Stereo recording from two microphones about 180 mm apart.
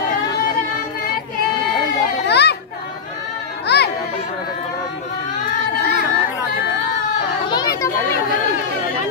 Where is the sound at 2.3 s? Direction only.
65° left (ahead or behind).